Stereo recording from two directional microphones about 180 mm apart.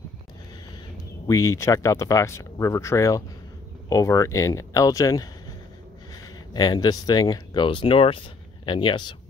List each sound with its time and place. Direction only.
1.2 s speech: 20° left (ahead or behind)